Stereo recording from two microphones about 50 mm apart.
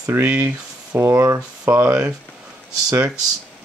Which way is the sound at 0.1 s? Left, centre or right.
Right.